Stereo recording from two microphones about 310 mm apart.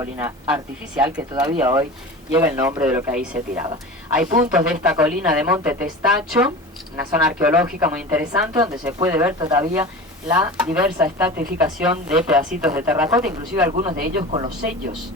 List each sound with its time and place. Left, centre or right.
0.0 s a woman's voice: centre
13.4 s speech: right